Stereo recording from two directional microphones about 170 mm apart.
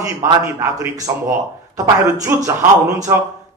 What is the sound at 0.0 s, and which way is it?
A man's voice, 15° right (ahead or behind).